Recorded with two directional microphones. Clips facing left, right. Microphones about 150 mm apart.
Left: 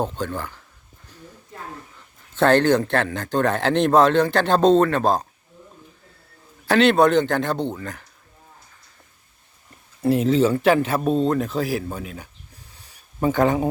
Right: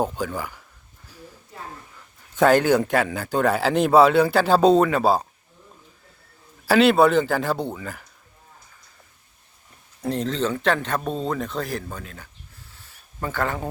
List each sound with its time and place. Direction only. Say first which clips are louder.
0.0 s speech: even; 10° right (ahead or behind)
2.3 s speech: even; 10° right (ahead or behind)
6.7 s speech: even; 5° right (ahead or behind)
10.0 s speech: left 7 dB; 5° left (ahead or behind)
12.7 s a sound: even; 15° left (ahead or behind)